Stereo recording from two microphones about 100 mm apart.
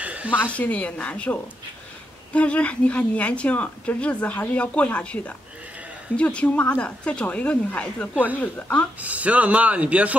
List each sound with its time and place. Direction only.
0.0 s a sound: 15° right (ahead or behind)
0.5 s a woman's voice: 15° left (ahead or behind)
9.0 s speech: 15° right (ahead or behind)